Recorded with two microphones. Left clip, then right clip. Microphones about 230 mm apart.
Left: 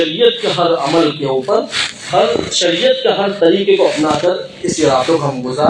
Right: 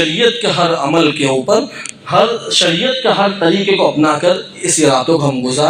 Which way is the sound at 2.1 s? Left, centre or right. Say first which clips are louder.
Right 2 dB; right.